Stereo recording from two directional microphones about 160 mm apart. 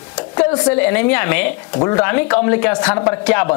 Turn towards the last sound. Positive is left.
turn(degrees=10)  # may be behind; listen again after turning